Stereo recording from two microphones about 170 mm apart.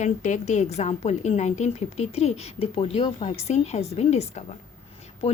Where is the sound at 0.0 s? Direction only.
45° left (ahead or behind).